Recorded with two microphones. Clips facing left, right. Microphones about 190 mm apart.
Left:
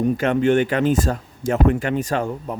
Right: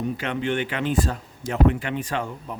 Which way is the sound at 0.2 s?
45° left (ahead or behind).